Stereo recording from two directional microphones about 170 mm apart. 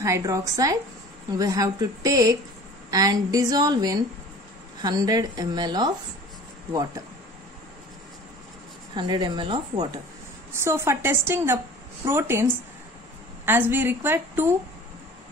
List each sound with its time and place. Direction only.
0.0 s a woman's voice: 20° right (ahead or behind)
8.9 s a woman's voice: 25° right (ahead or behind)
10.5 s a woman's voice: 15° right (ahead or behind)
13.5 s a woman's voice: 10° right (ahead or behind)